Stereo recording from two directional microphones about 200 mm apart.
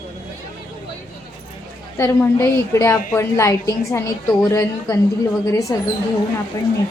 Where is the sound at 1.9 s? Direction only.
15° left (ahead or behind).